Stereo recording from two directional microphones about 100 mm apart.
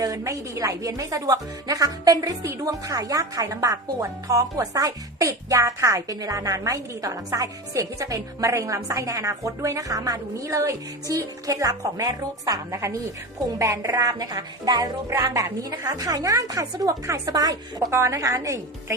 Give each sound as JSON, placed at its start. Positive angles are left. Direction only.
{"t": 0.0, "sound": "speech", "side_deg": -35}